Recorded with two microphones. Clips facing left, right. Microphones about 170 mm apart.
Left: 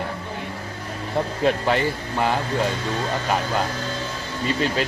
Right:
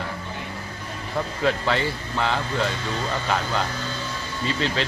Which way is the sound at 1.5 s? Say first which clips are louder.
Left 2 dB; 15° left (ahead or behind).